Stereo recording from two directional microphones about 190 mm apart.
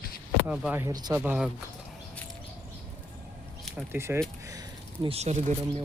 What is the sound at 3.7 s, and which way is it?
Speech, 10° right (ahead or behind).